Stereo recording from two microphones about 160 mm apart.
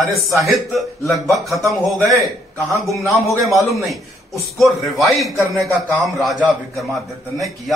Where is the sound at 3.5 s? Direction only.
Centre (ahead or behind).